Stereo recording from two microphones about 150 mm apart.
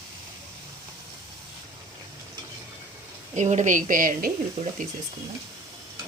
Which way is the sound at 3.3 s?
50° right (ahead or behind).